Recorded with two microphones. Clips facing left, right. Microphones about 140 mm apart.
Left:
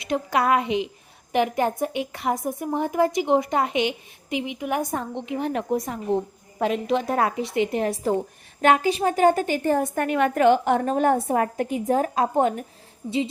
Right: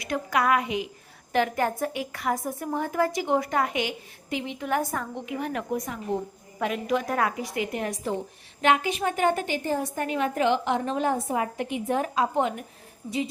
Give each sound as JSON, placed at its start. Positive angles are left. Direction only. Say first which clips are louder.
{"t": 0.0, "sound": "a woman's voice", "louder": "left 3 dB", "side_deg": 25}
{"t": 9.6, "sound": "a woman's voice", "louder": "left 7 dB", "side_deg": 55}